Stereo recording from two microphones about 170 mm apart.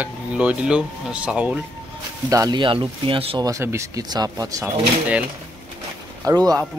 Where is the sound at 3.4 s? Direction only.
20° right (ahead or behind).